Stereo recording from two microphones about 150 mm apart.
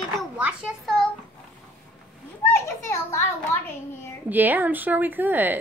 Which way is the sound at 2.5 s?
20° left (ahead or behind).